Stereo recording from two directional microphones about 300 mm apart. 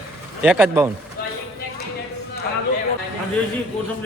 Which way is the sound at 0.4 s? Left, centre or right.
Centre.